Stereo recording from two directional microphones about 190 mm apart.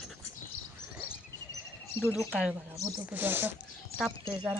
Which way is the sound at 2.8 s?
15° right (ahead or behind).